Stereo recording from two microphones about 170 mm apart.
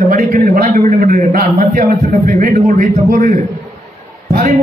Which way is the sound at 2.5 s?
45° right (ahead or behind).